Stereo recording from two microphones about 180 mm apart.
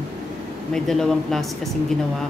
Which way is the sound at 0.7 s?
Centre (ahead or behind).